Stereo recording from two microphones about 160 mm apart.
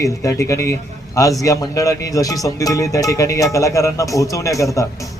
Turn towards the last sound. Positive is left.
turn(degrees=20)  # may be behind; listen again after turning